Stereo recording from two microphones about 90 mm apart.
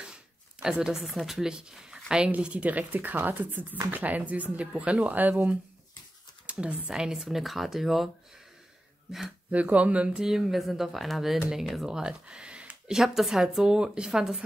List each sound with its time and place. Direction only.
0.0 s speech: 10° right (ahead or behind)
9.5 s speech: 15° right (ahead or behind)